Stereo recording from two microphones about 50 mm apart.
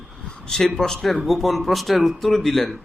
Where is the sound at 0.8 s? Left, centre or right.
Centre.